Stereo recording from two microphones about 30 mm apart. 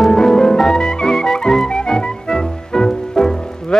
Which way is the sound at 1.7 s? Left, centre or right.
Left.